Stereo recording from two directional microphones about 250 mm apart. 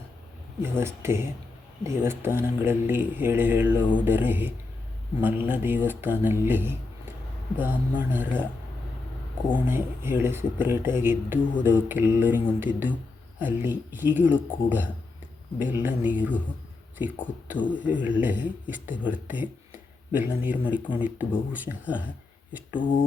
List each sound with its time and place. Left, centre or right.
0.6 s speech: centre
9.6 s speech: centre